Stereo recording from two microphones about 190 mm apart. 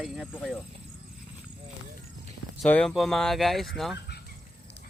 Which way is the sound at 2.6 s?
5° left (ahead or behind).